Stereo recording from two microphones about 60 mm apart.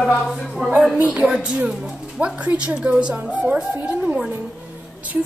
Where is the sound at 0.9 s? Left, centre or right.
Right.